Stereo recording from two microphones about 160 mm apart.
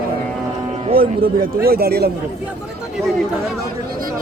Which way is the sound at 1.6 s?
75° right (ahead or behind).